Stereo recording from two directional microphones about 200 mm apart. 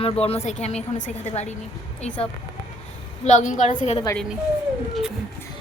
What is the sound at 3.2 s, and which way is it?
Speech, 35° left (ahead or behind).